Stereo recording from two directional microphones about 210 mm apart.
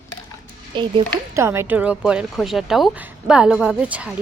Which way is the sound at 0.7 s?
25° right (ahead or behind).